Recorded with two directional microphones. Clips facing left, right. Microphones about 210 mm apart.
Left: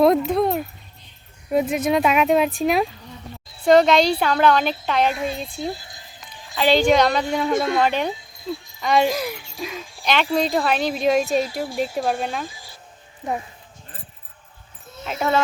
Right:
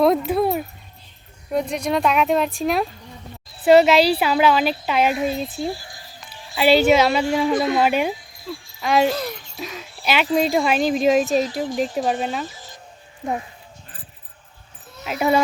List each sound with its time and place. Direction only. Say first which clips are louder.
0.0 s a sound: left 1 dB; centre (ahead or behind)
1.5 s speech: left 3 dB; 5° left (ahead or behind)
5.7 s music: right 2 dB; 20° left (ahead or behind)
6.6 s speech: right 1 dB; 10° right (ahead or behind)
8.1 s insect: left 3 dB; 20° left (ahead or behind)
8.8 s speech: right 1 dB; 5° right (ahead or behind)
9.0 s speech: right 1 dB; 10° left (ahead or behind)
10.0 s speech: right 1 dB; 10° right (ahead or behind)
11.6 s speech: right 1 dB; 10° left (ahead or behind)
12.4 s a sound: right 2 dB; 10° left (ahead or behind)
15.0 s speech: right 3 dB; 10° right (ahead or behind)